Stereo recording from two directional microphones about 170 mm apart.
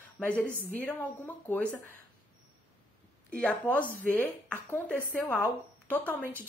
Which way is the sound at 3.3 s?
5° left (ahead or behind).